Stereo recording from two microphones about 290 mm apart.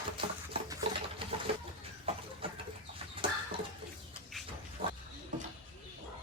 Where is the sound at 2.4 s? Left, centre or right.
Centre.